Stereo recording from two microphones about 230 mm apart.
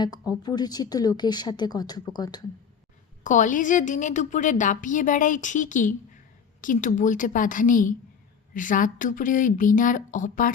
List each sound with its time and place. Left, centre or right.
0.0 s speech: centre
3.2 s a woman's voice: left